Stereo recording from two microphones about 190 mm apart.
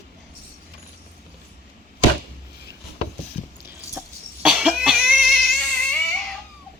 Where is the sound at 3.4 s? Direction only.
40° left (ahead or behind).